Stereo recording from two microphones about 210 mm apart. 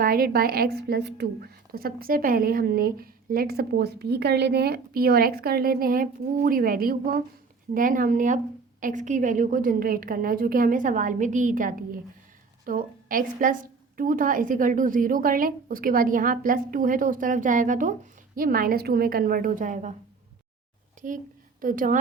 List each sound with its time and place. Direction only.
0.0 s a woman's voice: 45° right (ahead or behind)
21.0 s a woman's voice: 40° right (ahead or behind)